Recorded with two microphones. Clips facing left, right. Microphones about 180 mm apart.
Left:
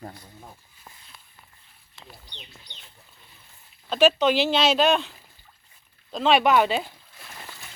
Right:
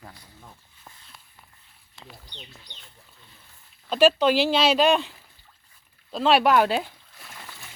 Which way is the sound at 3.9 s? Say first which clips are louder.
Right 1 dB; 10° right (ahead or behind).